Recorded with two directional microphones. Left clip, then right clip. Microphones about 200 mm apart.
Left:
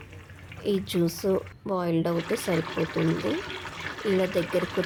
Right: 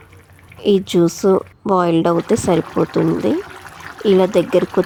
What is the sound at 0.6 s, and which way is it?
Speech, 35° right (ahead or behind).